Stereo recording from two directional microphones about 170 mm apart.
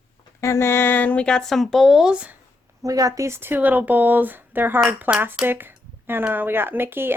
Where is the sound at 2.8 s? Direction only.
20° right (ahead or behind).